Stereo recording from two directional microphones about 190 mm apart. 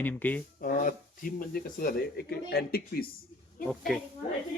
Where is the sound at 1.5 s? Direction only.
55° left (ahead or behind).